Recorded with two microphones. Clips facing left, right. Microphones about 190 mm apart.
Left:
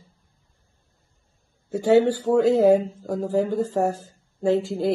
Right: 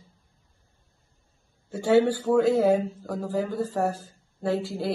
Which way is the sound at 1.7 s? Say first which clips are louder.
Left 3 dB; 20° left (ahead or behind).